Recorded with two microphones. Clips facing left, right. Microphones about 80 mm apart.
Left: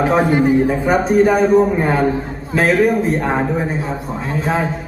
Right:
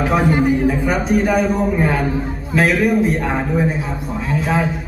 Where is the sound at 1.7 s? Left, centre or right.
Left.